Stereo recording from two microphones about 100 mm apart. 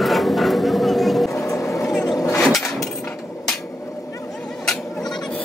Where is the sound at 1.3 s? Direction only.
30° left (ahead or behind).